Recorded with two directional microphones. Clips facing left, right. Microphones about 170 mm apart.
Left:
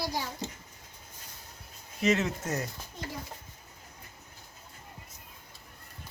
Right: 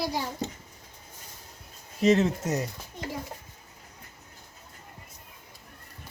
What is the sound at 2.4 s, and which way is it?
Speech, 15° right (ahead or behind).